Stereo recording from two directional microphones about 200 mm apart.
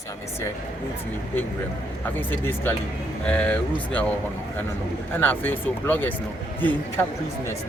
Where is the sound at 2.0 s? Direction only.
10° left (ahead or behind).